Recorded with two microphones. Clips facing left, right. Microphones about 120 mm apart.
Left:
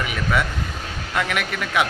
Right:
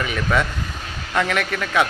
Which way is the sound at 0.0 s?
10° left (ahead or behind).